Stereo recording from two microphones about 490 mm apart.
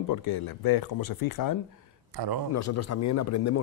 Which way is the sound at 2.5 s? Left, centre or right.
Left.